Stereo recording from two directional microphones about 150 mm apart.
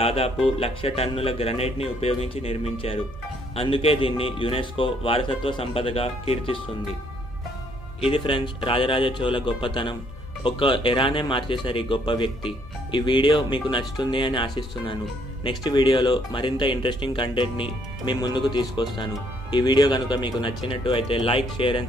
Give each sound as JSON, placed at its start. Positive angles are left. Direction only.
{"t": 0.0, "sound": "speech", "side_deg": 40}
{"t": 8.0, "sound": "speech", "side_deg": 35}